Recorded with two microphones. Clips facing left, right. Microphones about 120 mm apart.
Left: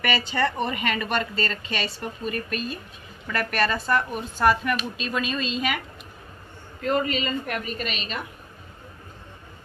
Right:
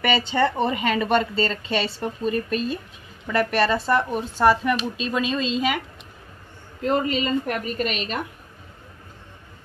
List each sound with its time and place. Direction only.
0.3 s speech: 25° right (ahead or behind)
6.8 s a woman's voice: 30° right (ahead or behind); by 8.2 s 50° right (ahead or behind)